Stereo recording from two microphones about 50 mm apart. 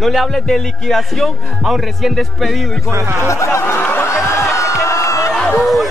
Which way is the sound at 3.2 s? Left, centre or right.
Left.